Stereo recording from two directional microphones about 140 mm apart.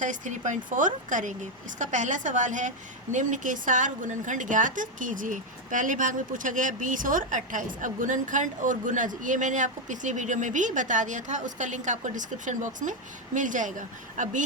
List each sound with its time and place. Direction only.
0.0 s a woman's voice: 65° right (ahead or behind)